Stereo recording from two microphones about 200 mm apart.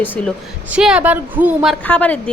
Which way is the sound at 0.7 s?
5° right (ahead or behind).